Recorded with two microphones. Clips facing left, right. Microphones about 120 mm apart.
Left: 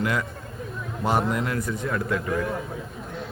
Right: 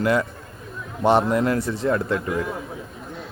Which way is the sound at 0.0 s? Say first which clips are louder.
Right 5 dB; 30° right (ahead or behind).